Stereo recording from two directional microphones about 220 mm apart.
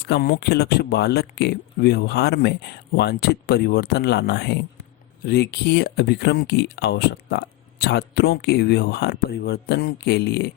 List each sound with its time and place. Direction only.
0.0 s speech: 45° left (ahead or behind)